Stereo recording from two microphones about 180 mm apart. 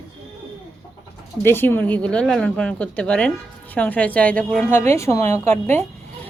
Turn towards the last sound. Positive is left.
turn(degrees=15)  # may be behind; listen again after turning